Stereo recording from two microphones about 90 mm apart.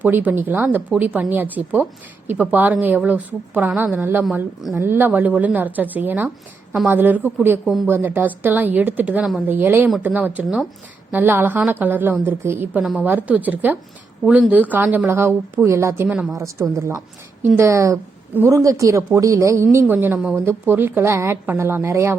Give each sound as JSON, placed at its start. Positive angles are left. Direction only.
{"t": 0.0, "sound": "speech", "side_deg": -20}
{"t": 7.6, "sound": "speech", "side_deg": 0}
{"t": 7.9, "sound": "a woman's voice", "side_deg": -25}